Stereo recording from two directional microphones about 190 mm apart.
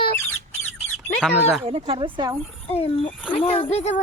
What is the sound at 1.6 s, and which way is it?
Speech, 30° right (ahead or behind).